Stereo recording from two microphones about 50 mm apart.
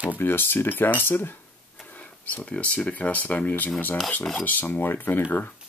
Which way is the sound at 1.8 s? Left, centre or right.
Left.